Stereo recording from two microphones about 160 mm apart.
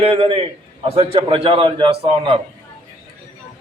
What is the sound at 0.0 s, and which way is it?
A man's voice, 35° right (ahead or behind).